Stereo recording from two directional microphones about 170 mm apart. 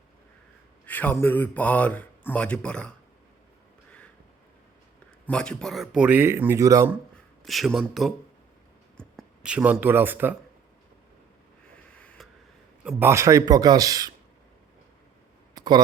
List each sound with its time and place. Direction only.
0.9 s speech: 10° left (ahead or behind)
5.2 s speech: 5° left (ahead or behind); by 6.9 s 20° right (ahead or behind)
7.4 s speech: centre (ahead or behind)
11.7 s a sound: 5° left (ahead or behind)
12.8 s speech: 10° right (ahead or behind)
15.5 s a sound: 25° right (ahead or behind)